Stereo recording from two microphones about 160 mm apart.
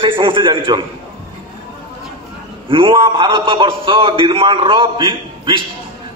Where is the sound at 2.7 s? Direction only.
30° right (ahead or behind).